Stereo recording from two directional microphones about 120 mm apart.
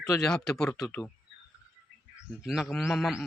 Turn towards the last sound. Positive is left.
turn(degrees=0)  # may be behind; listen again after turning